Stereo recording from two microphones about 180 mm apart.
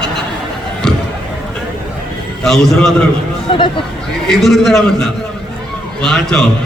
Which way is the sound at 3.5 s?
30° left (ahead or behind).